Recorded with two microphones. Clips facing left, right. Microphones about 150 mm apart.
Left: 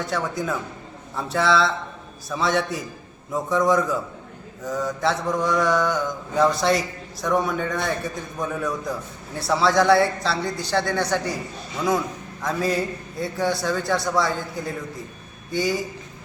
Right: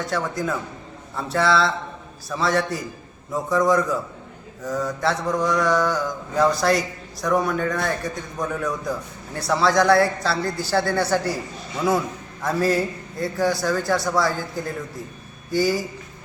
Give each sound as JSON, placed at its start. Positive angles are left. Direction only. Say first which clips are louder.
{"t": 0.0, "sound": "mantra", "louder": "right 1 dB", "side_deg": 0}
{"t": 12.4, "sound": "mantra", "louder": "right 3 dB", "side_deg": -5}
{"t": 15.5, "sound": "mantra", "louder": "right 3 dB", "side_deg": -5}